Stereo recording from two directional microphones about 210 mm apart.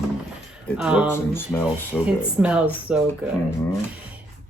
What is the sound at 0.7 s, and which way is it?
Speech, 5° right (ahead or behind).